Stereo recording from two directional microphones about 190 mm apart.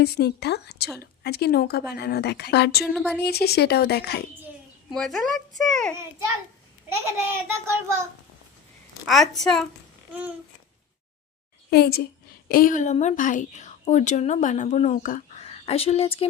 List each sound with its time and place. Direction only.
0.0 s a woman's voice: 55° left (ahead or behind)
2.9 s speech: 5° left (ahead or behind)
3.2 s a woman's voice: 55° left (ahead or behind)
4.9 s speech: centre (ahead or behind)
7.2 s child singing: 10° right (ahead or behind)
9.0 s speech: centre (ahead or behind)
10.1 s babbling: 10° right (ahead or behind)
11.7 s a woman's voice: 55° left (ahead or behind); by 16.2 s 30° left (ahead or behind)